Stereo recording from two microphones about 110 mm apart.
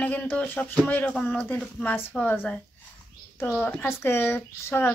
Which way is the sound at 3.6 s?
15° left (ahead or behind).